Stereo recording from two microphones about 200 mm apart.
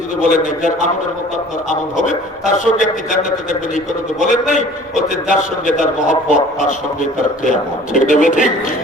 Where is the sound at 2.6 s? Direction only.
40° left (ahead or behind).